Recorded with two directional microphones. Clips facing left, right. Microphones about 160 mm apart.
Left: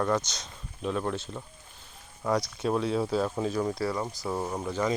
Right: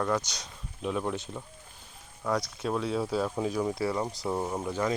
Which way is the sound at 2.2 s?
Centre (ahead or behind).